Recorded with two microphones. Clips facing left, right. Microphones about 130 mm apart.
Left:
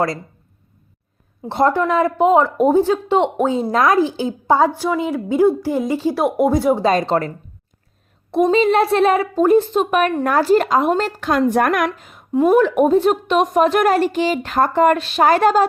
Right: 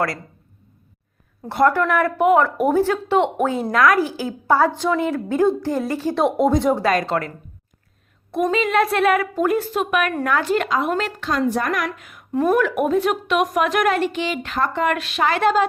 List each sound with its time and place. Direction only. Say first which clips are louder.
1.5 s a woman's voice: left 1 dB; 25° left (ahead or behind); by 6.8 s 5° left (ahead or behind)
6.8 s a woman's voice: left 3 dB; 25° left (ahead or behind)
11.2 s a woman's voice: left 5 dB; 55° left (ahead or behind)
11.9 s a woman's voice: left 3 dB; 30° left (ahead or behind)
12.3 s a woman's voice: left 4 dB; 15° left (ahead or behind)
12.8 s a woman's voice: left 5 dB; 30° left (ahead or behind)